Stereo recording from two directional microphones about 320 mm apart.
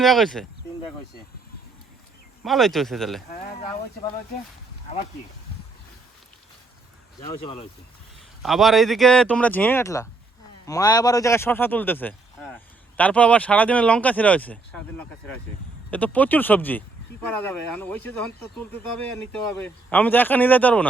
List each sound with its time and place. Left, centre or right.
0.0 s speech: centre
2.4 s speech: centre
7.2 s speech: centre
8.4 s speech: centre